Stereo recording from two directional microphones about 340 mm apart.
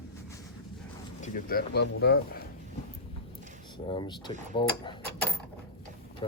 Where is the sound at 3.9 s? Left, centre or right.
Centre.